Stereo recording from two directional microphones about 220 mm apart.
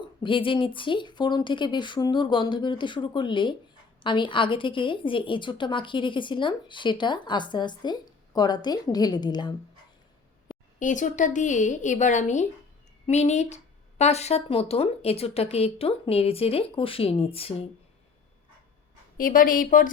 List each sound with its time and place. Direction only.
0.2 s a woman's voice: 25° left (ahead or behind)
10.8 s a woman's voice: 35° left (ahead or behind)
19.1 s a woman's voice: 40° left (ahead or behind)